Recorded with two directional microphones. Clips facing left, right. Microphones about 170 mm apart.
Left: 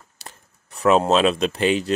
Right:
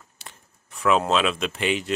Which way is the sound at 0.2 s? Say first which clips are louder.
Left 4 dB; 40° left (ahead or behind).